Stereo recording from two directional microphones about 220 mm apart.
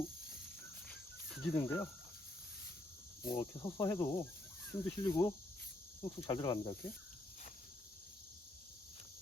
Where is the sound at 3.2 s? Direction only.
15° left (ahead or behind).